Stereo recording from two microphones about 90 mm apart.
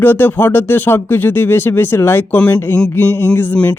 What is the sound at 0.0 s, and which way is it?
Speech, 25° left (ahead or behind).